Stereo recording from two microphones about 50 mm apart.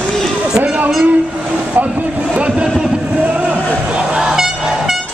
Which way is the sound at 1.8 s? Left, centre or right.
Right.